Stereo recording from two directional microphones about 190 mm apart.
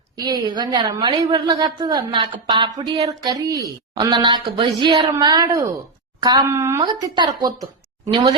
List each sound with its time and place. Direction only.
0.4 s a woman's voice: 20° right (ahead or behind)